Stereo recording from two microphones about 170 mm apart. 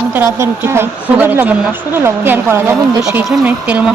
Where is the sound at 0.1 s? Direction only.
15° right (ahead or behind).